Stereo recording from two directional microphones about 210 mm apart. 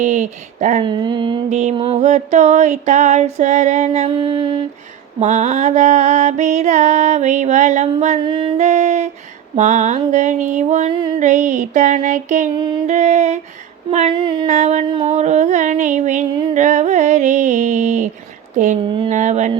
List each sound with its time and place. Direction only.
0.0 s music: 35° right (ahead or behind)
0.9 s a sound: 20° right (ahead or behind)
1.5 s music: 35° right (ahead or behind)
4.2 s a sound: 20° right (ahead or behind)
5.2 s music: 35° right (ahead or behind)
18.5 s speech: 35° right (ahead or behind)
18.9 s music: 35° right (ahead or behind)